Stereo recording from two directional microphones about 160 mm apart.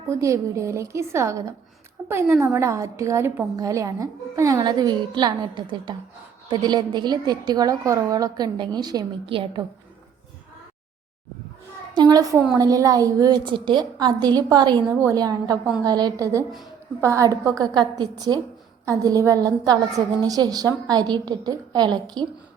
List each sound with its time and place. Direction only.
0.1 s a woman's voice: 20° right (ahead or behind)
2.0 s a sound: 10° right (ahead or behind)
2.4 s a woman's voice: 20° right (ahead or behind)
11.9 s a woman's voice: 25° right (ahead or behind)